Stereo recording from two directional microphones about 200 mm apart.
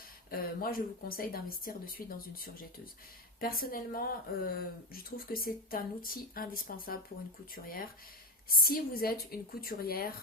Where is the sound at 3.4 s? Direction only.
45° left (ahead or behind).